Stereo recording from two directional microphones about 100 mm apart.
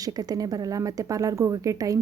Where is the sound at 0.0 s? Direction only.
40° right (ahead or behind).